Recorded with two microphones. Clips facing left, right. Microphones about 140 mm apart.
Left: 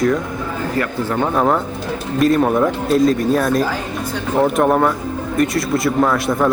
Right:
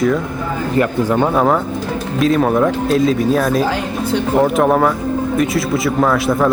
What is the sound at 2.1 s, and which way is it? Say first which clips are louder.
Speech: even; centre (ahead or behind).